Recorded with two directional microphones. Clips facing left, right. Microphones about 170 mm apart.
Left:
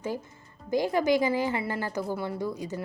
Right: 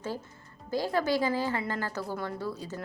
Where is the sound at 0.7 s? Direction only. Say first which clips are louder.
Left 4 dB; 15° left (ahead or behind).